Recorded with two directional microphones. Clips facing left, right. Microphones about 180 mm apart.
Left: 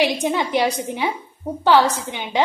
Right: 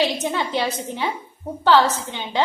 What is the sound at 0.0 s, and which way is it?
A woman's voice, 15° left (ahead or behind).